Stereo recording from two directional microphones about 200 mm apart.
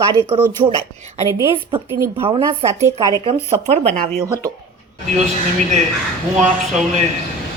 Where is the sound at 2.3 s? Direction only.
30° right (ahead or behind).